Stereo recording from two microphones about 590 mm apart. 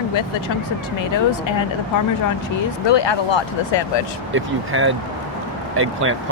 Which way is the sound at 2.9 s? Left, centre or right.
Left.